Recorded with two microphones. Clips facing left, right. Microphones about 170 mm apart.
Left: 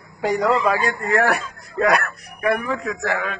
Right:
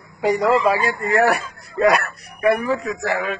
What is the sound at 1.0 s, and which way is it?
Speech, 15° right (ahead or behind).